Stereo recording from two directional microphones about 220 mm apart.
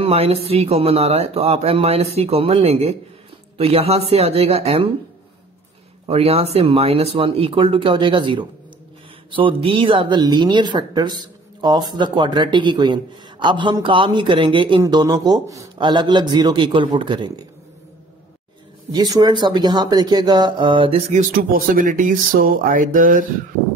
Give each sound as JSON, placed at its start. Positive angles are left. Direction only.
{"t": 0.0, "sound": "speech", "side_deg": -25}
{"t": 6.0, "sound": "speech", "side_deg": -25}
{"t": 18.9, "sound": "speech", "side_deg": -15}
{"t": 21.1, "sound": "speech", "side_deg": -40}